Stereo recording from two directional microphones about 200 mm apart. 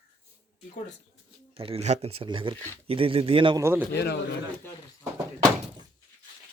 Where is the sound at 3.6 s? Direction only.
10° right (ahead or behind).